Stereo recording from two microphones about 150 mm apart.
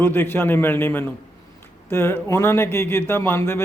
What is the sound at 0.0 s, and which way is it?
Speech, 15° left (ahead or behind).